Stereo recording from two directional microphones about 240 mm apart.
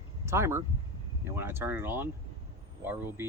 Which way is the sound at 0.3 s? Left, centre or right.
Centre.